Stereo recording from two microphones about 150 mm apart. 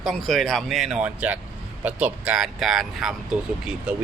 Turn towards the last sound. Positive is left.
turn(degrees=-5)  # may be behind; listen again after turning